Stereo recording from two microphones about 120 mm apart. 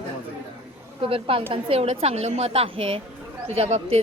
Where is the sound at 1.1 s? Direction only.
50° right (ahead or behind).